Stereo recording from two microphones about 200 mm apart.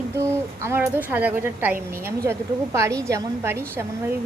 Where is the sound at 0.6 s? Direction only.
10° right (ahead or behind).